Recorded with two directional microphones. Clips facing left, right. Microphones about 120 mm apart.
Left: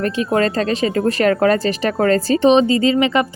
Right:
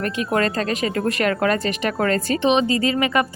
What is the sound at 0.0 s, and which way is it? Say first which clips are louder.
Speech: left 4 dB; 30° left (ahead or behind).